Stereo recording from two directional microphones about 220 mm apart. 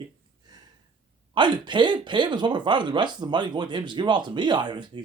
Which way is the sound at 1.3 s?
20° right (ahead or behind).